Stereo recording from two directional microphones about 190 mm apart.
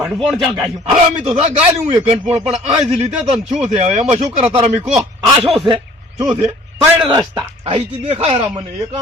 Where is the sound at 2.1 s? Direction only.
35° right (ahead or behind).